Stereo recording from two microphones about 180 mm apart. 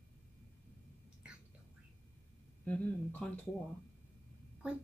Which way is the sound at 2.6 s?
5° left (ahead or behind).